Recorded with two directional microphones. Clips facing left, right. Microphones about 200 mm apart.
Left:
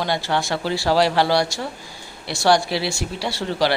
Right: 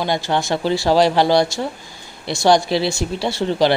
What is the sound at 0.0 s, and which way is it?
Speech, 20° right (ahead or behind).